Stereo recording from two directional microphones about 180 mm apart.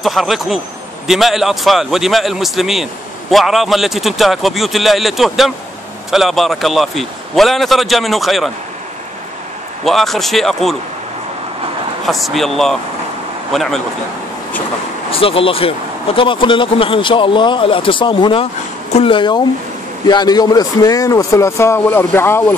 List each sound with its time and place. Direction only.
0.0 s a man's voice: centre (ahead or behind)
9.8 s a man's voice: centre (ahead or behind)
12.1 s a man's voice: centre (ahead or behind)
15.0 s speech: 30° left (ahead or behind); by 22.6 s 10° left (ahead or behind)